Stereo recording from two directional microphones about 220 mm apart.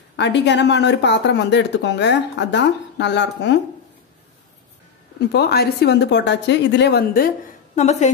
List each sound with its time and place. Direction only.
0.1 s speech: 50° left (ahead or behind)
5.3 s speech: 45° left (ahead or behind)
7.7 s a woman's voice: 30° left (ahead or behind)